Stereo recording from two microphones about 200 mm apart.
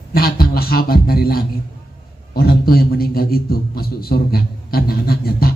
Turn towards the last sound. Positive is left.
turn(degrees=50)  # may be behind; listen again after turning